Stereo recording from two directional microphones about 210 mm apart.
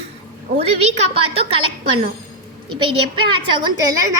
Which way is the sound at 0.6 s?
30° right (ahead or behind).